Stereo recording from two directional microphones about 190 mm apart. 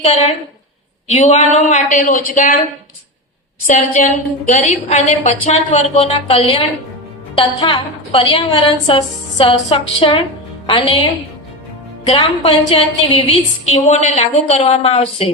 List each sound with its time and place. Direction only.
0.0 s a woman's voice: 30° left (ahead or behind)
3.7 s a woman's voice: 40° left (ahead or behind)
12.0 s a woman's voice: 30° left (ahead or behind)